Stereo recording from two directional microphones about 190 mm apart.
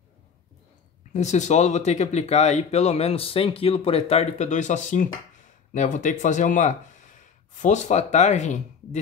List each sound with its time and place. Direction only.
1.1 s speech: 40° left (ahead or behind)